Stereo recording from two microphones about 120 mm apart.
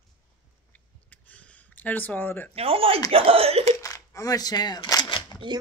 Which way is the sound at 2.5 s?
55° right (ahead or behind).